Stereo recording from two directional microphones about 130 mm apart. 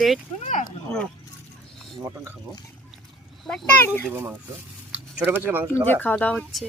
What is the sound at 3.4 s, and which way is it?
Speech, centre (ahead or behind).